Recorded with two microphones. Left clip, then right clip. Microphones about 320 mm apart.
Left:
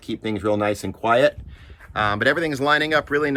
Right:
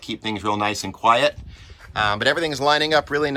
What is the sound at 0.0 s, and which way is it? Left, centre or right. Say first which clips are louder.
Speech: left 1 dB; centre.